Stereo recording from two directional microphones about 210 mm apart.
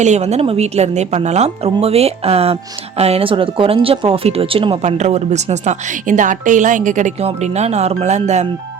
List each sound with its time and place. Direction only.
0.0 s speech: 35° right (ahead or behind)